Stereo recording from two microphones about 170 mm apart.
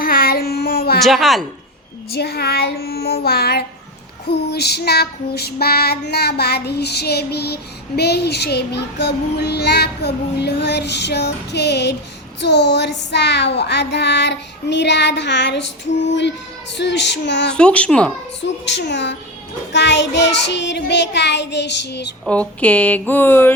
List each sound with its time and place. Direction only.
0.0 s child singing: 60° left (ahead or behind)
0.9 s a child's voice: centre (ahead or behind)
2.1 s child singing: 70° left (ahead or behind)
12.4 s child singing: 90° left
16.7 s child singing: 90° left
17.5 s a child's voice: 5° left (ahead or behind)
18.4 s child singing: 90° left
22.3 s speech: 5° left (ahead or behind)